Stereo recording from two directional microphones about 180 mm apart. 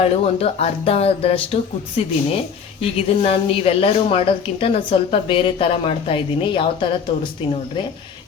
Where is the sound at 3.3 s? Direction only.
30° left (ahead or behind).